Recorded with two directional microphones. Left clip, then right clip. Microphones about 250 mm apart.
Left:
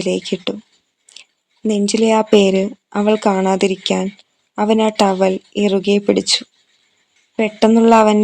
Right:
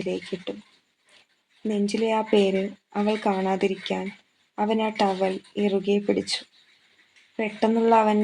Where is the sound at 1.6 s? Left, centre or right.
Left.